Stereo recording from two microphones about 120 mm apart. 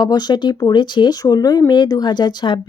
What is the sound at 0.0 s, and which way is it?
Speech, 35° left (ahead or behind).